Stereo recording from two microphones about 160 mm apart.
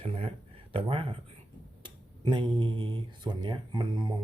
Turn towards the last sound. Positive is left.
turn(degrees=-25)  # may be behind; listen again after turning